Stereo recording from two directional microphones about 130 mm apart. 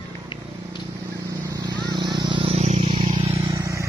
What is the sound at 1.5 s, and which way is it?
Vehicle, 30° right (ahead or behind).